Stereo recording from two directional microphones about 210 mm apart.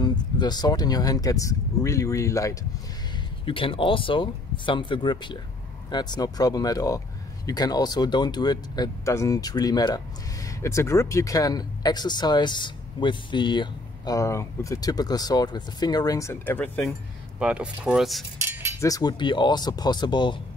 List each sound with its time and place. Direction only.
0.0 s speech: 20° left (ahead or behind)
3.4 s speech: 25° left (ahead or behind); by 16.8 s 10° left (ahead or behind)
17.4 s speech: 5° right (ahead or behind)
18.4 s cutlery: 10° right (ahead or behind)
18.8 s speech: 15° left (ahead or behind)